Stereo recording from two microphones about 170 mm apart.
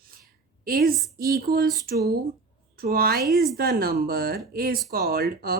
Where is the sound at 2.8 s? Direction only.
60° right (ahead or behind).